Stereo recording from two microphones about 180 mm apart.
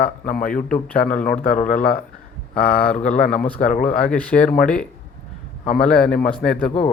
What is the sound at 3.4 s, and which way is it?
Speech, 10° left (ahead or behind).